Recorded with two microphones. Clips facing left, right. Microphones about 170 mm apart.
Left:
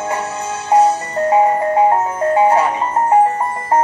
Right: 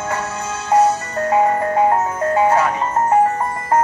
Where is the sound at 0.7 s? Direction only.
30° left (ahead or behind).